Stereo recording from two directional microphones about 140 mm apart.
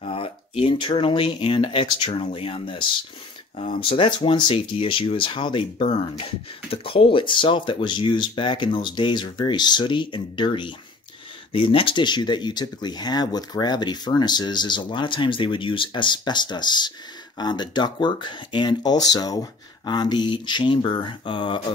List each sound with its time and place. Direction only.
0.0 s speech: 40° left (ahead or behind)
3.9 s speech: 40° left (ahead or behind)